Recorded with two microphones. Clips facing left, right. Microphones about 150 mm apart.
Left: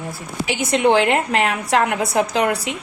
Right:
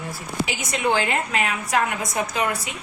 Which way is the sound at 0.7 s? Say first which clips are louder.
Left 8 dB; 70° left (ahead or behind).